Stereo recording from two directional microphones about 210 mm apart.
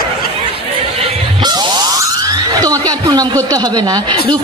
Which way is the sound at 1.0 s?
20° right (ahead or behind).